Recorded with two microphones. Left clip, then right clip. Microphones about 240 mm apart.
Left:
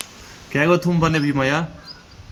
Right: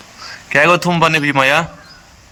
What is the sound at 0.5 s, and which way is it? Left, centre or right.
A man's voice, right.